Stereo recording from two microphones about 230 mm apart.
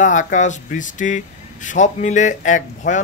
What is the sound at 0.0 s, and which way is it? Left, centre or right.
A man's voice, left.